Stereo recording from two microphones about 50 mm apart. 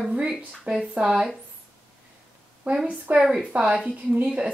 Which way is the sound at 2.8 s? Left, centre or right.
Right.